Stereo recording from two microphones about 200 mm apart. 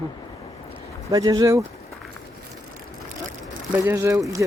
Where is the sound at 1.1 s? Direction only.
20° right (ahead or behind).